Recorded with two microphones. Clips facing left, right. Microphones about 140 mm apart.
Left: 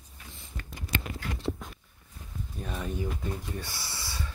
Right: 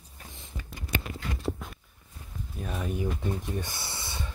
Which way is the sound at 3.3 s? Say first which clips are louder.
Right 4 dB; 20° right (ahead or behind).